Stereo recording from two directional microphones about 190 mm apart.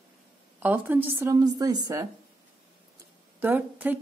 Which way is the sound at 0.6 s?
10° right (ahead or behind).